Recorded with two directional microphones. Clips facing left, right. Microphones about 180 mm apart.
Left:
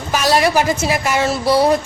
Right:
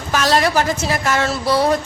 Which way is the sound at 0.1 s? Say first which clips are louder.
Left 1 dB; 10° left (ahead or behind).